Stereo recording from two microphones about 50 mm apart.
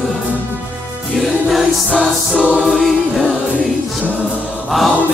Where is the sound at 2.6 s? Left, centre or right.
Centre.